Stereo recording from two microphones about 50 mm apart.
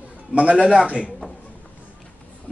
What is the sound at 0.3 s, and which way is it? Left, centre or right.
Speech, right.